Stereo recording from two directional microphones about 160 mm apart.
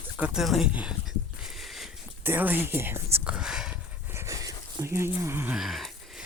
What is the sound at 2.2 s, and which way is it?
Speech, 10° right (ahead or behind).